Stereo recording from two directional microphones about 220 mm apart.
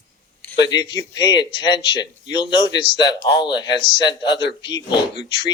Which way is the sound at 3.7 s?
20° left (ahead or behind).